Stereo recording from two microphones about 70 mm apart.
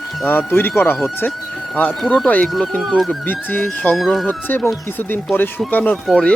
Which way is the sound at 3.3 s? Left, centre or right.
Left.